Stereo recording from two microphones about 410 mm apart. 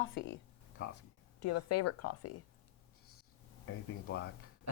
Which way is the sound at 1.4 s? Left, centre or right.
Left.